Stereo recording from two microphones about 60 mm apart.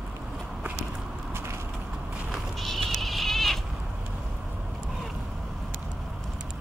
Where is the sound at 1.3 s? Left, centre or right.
Right.